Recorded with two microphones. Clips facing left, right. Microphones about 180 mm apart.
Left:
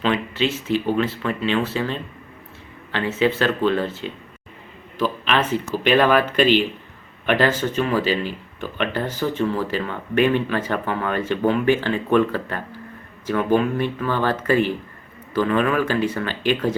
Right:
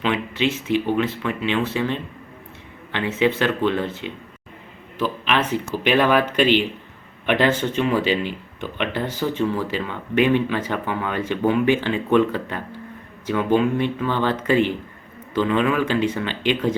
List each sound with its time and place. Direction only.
0.0 s speech: 15° right (ahead or behind)